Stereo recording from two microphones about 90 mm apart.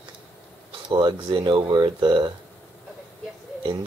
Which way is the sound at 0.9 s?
60° right (ahead or behind).